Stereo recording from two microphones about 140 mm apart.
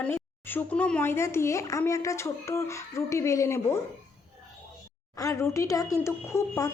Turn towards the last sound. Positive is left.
turn(degrees=20)  # may be behind; listen again after turning